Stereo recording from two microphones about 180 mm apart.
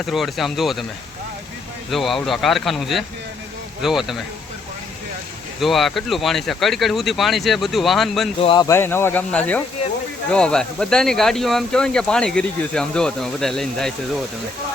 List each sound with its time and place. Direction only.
0.0 s speech: centre (ahead or behind)
1.9 s speech: centre (ahead or behind)
5.5 s speech: centre (ahead or behind)
8.4 s speech: 30° left (ahead or behind)
8.6 s speech: 15° left (ahead or behind)